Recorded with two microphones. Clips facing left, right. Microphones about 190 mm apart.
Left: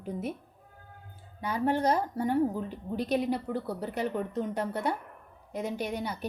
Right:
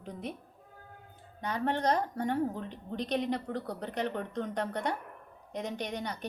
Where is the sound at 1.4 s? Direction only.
10° left (ahead or behind).